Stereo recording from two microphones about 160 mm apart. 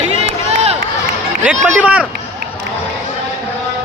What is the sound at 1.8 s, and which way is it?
Speech, 10° right (ahead or behind).